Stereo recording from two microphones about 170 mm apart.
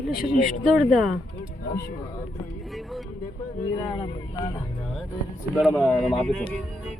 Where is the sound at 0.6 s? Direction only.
5° right (ahead or behind).